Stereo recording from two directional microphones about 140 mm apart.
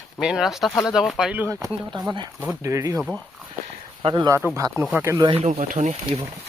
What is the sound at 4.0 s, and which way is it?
Speech, 35° right (ahead or behind).